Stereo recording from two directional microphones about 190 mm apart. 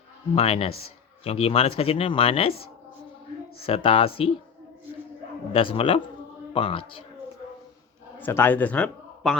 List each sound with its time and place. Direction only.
0.3 s a man's voice: 30° left (ahead or behind)
3.6 s speech: 30° left (ahead or behind)
5.5 s speech: 30° left (ahead or behind)
8.2 s speech: 10° left (ahead or behind)